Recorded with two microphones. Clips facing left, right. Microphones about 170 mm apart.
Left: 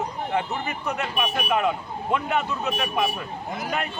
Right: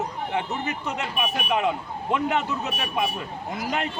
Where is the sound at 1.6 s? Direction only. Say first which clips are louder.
Even; 20° right (ahead or behind).